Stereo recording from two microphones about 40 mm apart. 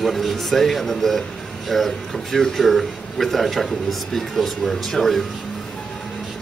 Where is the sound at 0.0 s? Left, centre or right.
Centre.